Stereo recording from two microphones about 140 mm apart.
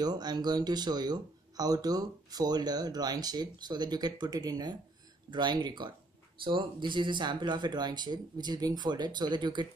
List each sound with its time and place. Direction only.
0.0 s speech: 30° right (ahead or behind)